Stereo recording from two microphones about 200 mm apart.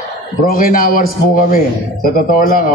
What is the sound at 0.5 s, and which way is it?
A man's voice, 45° left (ahead or behind).